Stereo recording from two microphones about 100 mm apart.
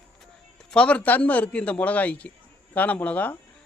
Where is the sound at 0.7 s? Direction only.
10° left (ahead or behind).